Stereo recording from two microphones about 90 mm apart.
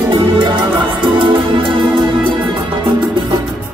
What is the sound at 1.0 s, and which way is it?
Music, 65° right (ahead or behind).